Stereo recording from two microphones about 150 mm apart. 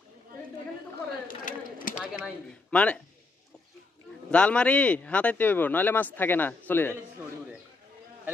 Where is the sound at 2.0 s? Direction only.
5° right (ahead or behind).